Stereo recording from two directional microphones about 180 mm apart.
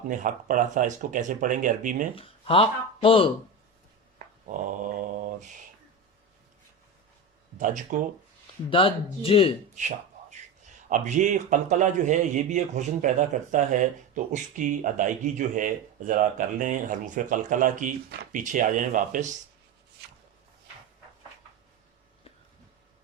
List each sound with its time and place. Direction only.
0.1 s a man's voice: 45° right (ahead or behind)
2.1 s speech: 30° left (ahead or behind)
4.4 s mantra: 45° right (ahead or behind)
7.6 s a man's voice: 45° right (ahead or behind)
8.7 s speech: 30° left (ahead or behind)
10.8 s a man's voice: 45° right (ahead or behind)